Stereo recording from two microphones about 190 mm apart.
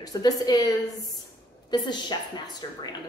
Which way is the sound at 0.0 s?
20° left (ahead or behind).